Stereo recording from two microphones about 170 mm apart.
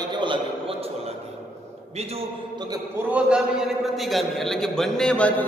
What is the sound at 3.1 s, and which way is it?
A man's voice, 5° right (ahead or behind).